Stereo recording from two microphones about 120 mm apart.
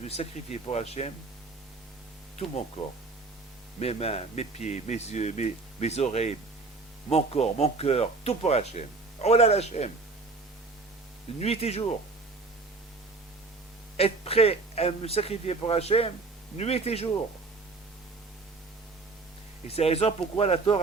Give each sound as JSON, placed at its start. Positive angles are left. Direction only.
{"t": 0.0, "sound": "speech", "side_deg": 65}
{"t": 3.8, "sound": "speech", "side_deg": 60}
{"t": 11.3, "sound": "speech", "side_deg": 60}
{"t": 13.9, "sound": "speech", "side_deg": 55}
{"t": 19.6, "sound": "speech", "side_deg": 55}